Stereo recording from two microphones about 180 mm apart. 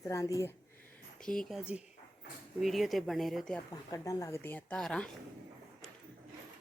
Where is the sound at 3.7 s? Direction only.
20° left (ahead or behind); by 5.0 s 5° left (ahead or behind).